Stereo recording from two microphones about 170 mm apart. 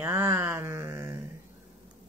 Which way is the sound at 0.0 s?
15° right (ahead or behind).